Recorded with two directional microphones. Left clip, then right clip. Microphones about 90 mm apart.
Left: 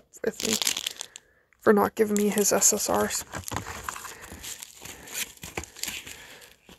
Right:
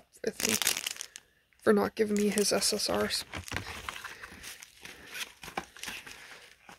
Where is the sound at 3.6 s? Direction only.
35° left (ahead or behind).